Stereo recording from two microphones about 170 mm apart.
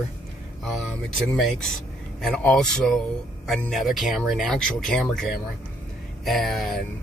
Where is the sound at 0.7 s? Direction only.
Centre (ahead or behind).